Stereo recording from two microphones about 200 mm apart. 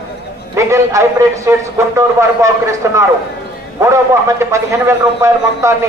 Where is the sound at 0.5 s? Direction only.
15° right (ahead or behind).